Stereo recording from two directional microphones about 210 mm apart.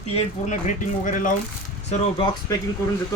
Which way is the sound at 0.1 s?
35° left (ahead or behind).